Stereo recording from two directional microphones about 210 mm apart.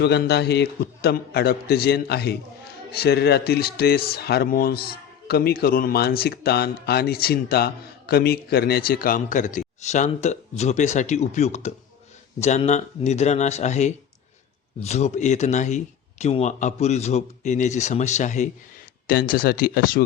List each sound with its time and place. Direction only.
0.0 s speech: 50° left (ahead or behind)